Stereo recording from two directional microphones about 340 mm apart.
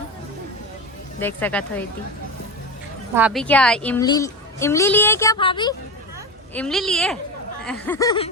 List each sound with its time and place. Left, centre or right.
1.4 s a woman's voice: centre
3.2 s a woman's voice: centre
6.5 s a woman's voice: centre